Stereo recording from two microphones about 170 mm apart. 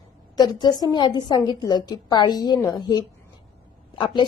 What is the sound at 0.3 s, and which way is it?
A woman's voice, 25° left (ahead or behind).